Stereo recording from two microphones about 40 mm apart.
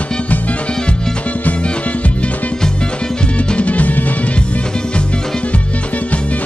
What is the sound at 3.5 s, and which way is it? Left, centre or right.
Music, left.